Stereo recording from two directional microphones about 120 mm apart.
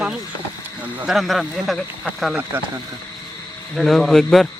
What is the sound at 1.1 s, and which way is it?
Speech, centre (ahead or behind).